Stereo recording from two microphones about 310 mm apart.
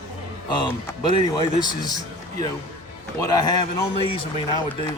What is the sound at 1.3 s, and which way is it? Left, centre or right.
Speech, centre.